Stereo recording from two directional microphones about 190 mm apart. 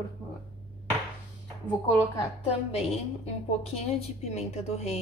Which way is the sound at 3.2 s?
30° left (ahead or behind).